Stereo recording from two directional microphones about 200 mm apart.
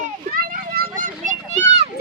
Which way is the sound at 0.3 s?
45° right (ahead or behind).